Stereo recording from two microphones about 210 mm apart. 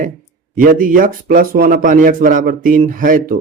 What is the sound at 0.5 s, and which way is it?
Speech, 40° right (ahead or behind).